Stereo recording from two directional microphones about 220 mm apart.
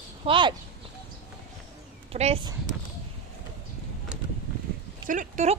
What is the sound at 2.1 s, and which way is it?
Speech, 25° right (ahead or behind).